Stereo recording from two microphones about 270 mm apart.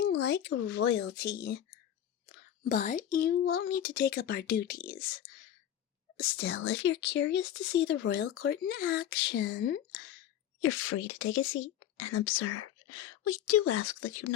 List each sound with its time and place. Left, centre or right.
0.0 s speech: left
2.6 s speech: left
6.2 s speech: left
10.6 s speech: left
11.2 s speech: left